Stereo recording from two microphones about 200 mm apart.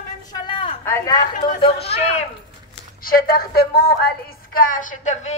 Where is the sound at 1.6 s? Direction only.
30° left (ahead or behind).